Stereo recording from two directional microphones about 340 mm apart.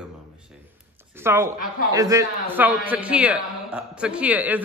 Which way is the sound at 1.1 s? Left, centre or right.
Centre.